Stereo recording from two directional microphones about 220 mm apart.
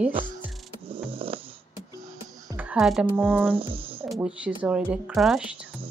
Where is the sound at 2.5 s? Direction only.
5° right (ahead or behind).